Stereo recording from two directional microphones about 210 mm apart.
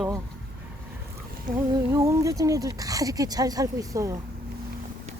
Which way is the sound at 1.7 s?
15° right (ahead or behind).